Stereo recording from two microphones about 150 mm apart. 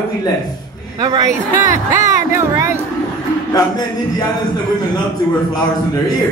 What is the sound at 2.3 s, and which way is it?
Speech, 20° right (ahead or behind).